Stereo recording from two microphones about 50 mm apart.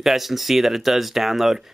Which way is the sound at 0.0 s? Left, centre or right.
Centre.